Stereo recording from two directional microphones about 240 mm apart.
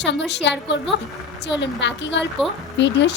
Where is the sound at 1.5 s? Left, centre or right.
Left.